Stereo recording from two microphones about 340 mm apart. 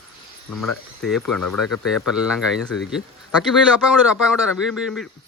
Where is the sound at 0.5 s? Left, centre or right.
Left.